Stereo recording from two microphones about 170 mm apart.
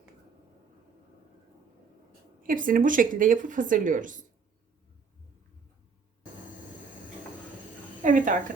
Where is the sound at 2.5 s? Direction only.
55° right (ahead or behind).